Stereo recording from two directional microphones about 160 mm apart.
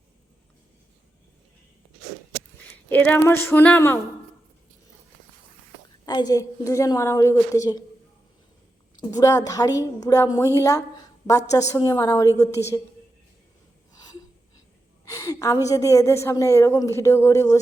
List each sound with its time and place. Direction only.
2.9 s a woman's voice: 10° left (ahead or behind)
6.1 s a woman's voice: 25° left (ahead or behind)
9.0 s a woman's voice: 20° left (ahead or behind)
15.1 s a woman's voice: 20° left (ahead or behind)